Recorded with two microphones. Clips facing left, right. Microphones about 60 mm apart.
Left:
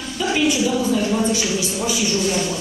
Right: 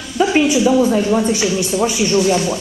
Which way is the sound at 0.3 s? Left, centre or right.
Right.